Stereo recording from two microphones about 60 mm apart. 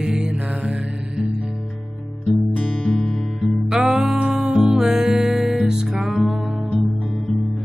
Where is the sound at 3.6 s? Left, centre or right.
Centre.